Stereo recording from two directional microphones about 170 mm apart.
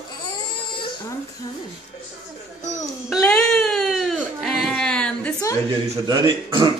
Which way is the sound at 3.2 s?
5° left (ahead or behind).